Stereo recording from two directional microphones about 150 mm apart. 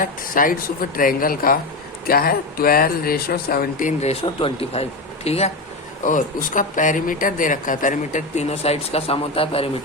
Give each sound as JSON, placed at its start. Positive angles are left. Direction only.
{"t": 0.0, "sound": "speech", "side_deg": 65}
{"t": 4.1, "sound": "speech", "side_deg": 35}
{"t": 6.1, "sound": "speech", "side_deg": 60}